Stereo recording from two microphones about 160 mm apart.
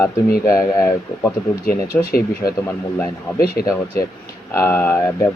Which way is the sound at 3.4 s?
70° left (ahead or behind).